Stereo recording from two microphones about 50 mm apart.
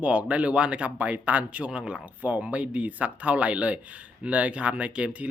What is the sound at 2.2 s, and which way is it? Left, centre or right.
Speech, right.